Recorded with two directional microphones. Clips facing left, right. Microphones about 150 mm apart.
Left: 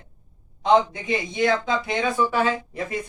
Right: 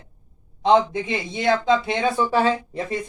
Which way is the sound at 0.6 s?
25° right (ahead or behind).